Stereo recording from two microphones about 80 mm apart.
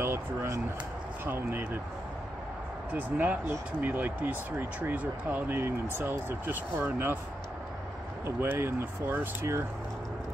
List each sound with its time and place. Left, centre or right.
0.0 s a sound: right
1.2 s speech: right
2.9 s speech: centre
8.4 s speech: right